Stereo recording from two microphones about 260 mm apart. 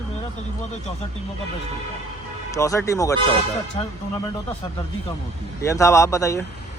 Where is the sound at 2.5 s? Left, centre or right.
Centre.